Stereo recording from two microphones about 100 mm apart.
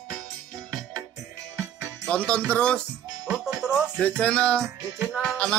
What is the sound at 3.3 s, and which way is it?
Music, 5° right (ahead or behind).